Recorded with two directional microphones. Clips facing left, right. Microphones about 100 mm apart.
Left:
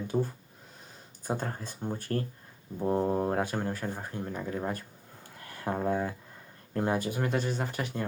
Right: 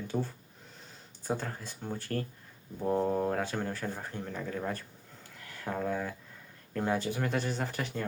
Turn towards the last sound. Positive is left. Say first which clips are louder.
# left 2 dB
turn(degrees=0)  # may be behind; listen again after turning